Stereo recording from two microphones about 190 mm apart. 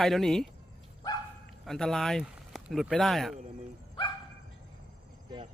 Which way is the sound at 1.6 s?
Centre (ahead or behind).